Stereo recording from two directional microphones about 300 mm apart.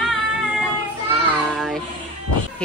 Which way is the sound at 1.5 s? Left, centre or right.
Centre.